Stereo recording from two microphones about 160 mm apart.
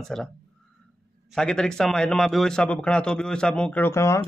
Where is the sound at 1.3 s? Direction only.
5° left (ahead or behind).